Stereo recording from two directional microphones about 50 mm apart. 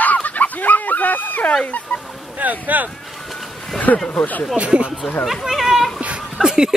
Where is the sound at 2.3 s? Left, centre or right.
Right.